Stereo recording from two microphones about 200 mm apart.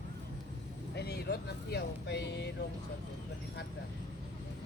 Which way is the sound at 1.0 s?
55° left (ahead or behind).